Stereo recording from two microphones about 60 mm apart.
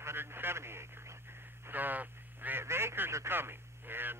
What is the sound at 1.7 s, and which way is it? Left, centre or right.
Speech, right.